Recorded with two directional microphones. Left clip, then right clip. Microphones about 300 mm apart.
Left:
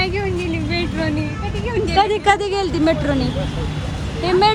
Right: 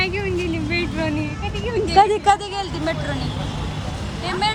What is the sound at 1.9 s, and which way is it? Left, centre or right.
Speech, right.